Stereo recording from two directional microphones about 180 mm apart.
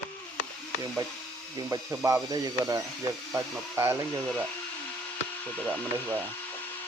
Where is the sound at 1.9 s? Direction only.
10° right (ahead or behind).